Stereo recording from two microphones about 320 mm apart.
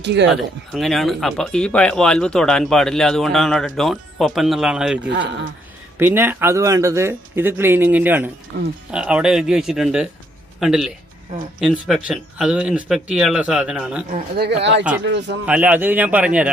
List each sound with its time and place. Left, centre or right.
0.0 s speech: right
0.3 s speech: centre
6.0 s speech: centre
14.1 s speech: right
15.4 s speech: centre